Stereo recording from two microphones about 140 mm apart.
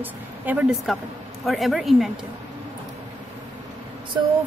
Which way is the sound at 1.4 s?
Centre (ahead or behind).